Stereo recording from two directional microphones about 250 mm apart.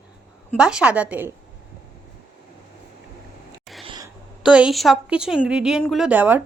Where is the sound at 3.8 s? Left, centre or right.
Centre.